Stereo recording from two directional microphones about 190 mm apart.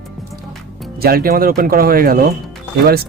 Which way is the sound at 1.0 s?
50° right (ahead or behind).